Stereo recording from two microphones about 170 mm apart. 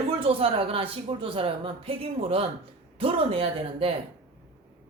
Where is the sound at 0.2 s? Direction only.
35° right (ahead or behind).